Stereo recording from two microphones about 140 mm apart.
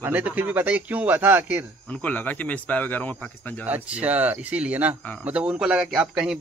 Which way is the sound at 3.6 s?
10° right (ahead or behind).